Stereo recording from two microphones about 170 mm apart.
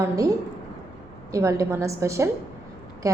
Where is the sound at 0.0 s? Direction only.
20° right (ahead or behind).